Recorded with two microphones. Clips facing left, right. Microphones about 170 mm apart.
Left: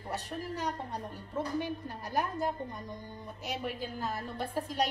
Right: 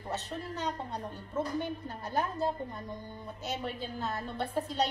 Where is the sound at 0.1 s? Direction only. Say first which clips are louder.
Even; 10° left (ahead or behind).